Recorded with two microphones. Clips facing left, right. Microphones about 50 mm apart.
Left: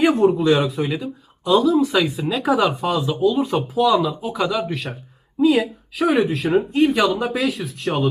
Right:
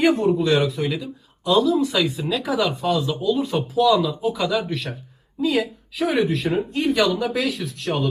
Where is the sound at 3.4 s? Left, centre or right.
Left.